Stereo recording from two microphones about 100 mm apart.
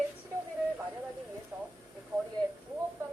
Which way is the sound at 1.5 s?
20° right (ahead or behind).